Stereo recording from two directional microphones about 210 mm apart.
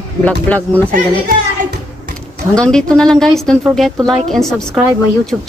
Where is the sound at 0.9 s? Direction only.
40° right (ahead or behind).